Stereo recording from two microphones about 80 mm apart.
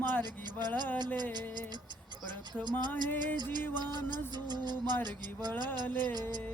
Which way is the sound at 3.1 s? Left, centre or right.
Right.